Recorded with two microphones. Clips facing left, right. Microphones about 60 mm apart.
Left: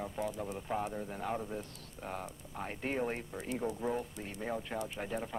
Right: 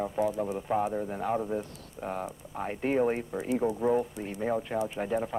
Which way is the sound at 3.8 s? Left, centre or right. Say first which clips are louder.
Right 9 dB; centre.